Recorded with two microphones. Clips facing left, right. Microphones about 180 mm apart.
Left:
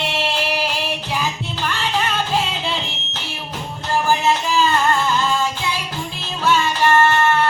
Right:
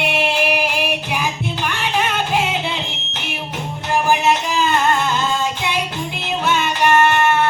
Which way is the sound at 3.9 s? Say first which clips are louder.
Right 1 dB; 20° right (ahead or behind).